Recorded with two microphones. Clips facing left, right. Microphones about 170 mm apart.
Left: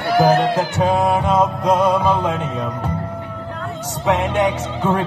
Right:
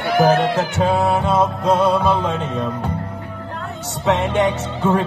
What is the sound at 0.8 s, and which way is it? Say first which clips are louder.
Music: even; 10° left (ahead or behind).